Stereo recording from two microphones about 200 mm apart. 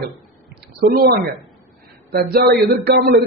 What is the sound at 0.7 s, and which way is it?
A man's voice, 50° right (ahead or behind).